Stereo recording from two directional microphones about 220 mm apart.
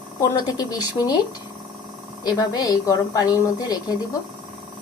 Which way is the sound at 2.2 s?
15° left (ahead or behind).